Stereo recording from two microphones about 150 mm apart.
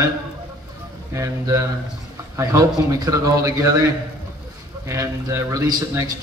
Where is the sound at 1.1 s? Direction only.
20° right (ahead or behind).